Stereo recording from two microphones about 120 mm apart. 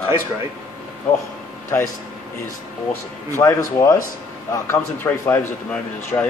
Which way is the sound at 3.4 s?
30° left (ahead or behind).